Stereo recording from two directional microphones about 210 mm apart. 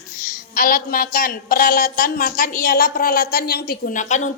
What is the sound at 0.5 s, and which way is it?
A woman's voice, 40° left (ahead or behind).